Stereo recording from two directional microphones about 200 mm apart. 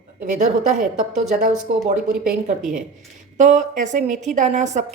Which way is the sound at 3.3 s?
40° right (ahead or behind).